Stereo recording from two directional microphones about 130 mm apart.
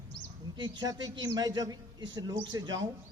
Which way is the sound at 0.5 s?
35° right (ahead or behind).